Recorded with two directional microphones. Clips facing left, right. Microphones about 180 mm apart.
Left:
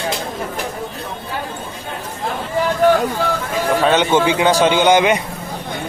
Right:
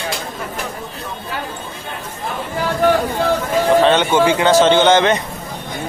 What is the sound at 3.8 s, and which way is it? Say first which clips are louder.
Speech: right 1 dB; 10° left (ahead or behind).